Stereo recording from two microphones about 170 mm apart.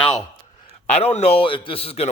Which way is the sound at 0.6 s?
40° left (ahead or behind).